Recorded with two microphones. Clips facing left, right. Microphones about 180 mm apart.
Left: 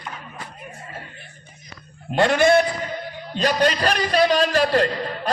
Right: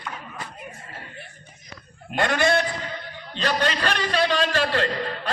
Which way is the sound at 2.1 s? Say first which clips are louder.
Left 6 dB; 25° left (ahead or behind).